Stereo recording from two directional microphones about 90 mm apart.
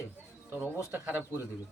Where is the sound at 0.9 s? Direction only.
25° right (ahead or behind).